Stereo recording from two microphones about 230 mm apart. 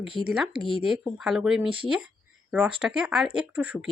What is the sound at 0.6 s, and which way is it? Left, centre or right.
Speech, left.